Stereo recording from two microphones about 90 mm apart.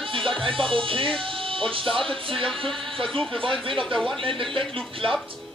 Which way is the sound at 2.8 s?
75° right (ahead or behind).